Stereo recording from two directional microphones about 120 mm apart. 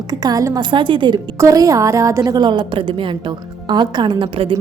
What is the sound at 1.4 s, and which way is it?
A woman's voice, 30° right (ahead or behind).